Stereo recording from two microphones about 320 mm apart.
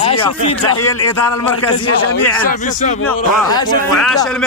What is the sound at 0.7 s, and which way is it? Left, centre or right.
Speech, left.